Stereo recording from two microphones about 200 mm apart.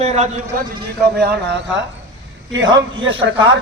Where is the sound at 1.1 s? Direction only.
55° right (ahead or behind).